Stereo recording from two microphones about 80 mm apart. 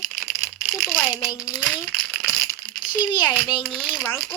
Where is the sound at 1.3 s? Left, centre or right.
Left.